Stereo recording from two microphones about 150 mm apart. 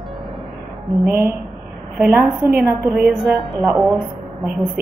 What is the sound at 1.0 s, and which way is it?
Speech, 15° right (ahead or behind).